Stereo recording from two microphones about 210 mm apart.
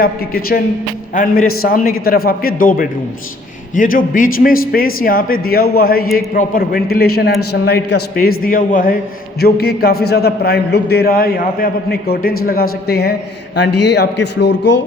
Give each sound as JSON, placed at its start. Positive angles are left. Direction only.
{"t": 0.0, "sound": "a man's voice", "side_deg": 45}